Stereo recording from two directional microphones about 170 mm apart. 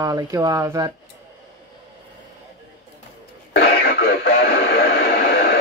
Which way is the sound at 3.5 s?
70° left (ahead or behind).